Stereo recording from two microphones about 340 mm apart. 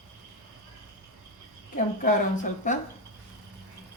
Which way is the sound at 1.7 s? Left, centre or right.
Left.